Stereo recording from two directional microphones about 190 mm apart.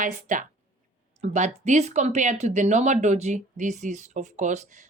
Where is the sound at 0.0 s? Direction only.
45° right (ahead or behind).